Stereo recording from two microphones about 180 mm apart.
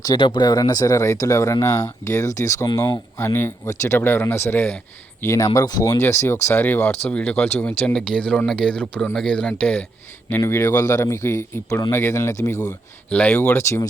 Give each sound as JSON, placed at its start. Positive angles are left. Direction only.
{"t": 0.0, "sound": "speech", "side_deg": 25}